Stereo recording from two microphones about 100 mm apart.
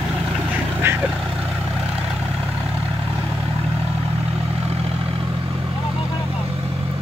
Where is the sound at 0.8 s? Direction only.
25° right (ahead or behind).